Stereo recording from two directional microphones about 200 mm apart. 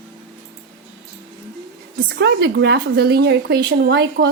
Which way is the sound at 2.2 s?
60° right (ahead or behind).